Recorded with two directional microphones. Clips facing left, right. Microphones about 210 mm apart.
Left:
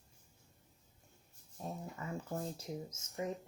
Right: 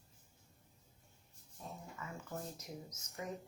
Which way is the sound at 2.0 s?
30° left (ahead or behind).